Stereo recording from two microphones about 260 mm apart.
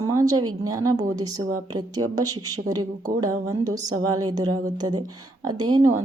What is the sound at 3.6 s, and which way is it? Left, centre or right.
A woman's voice, centre.